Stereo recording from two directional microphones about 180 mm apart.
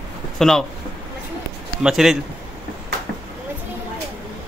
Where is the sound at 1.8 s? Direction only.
5° right (ahead or behind).